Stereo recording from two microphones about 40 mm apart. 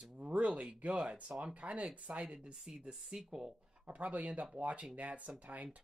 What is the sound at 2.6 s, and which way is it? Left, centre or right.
Speech, centre.